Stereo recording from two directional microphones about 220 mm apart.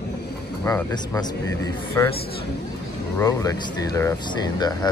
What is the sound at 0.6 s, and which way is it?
Speech, 15° left (ahead or behind).